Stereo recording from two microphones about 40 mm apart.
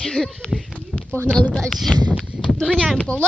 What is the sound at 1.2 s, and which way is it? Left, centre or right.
Speech, left.